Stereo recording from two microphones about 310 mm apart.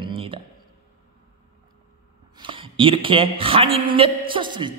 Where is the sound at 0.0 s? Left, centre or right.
Centre.